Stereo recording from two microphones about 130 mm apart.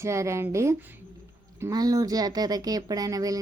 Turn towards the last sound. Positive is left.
turn(degrees=-25)  # may be behind; listen again after turning